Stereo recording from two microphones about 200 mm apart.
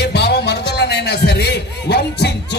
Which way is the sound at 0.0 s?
55° left (ahead or behind).